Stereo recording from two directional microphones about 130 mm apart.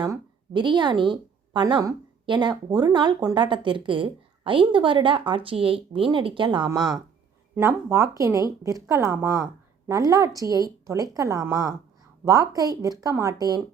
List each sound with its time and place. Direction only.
0.0 s a woman's voice: 35° right (ahead or behind)
7.5 s a woman's voice: 15° right (ahead or behind)